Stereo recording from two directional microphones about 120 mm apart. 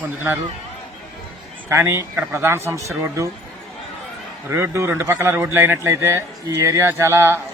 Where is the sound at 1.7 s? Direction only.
20° right (ahead or behind).